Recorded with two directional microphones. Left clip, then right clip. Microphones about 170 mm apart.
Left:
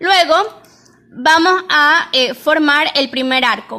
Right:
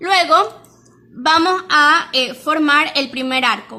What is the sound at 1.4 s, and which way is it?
A woman's voice, 25° left (ahead or behind).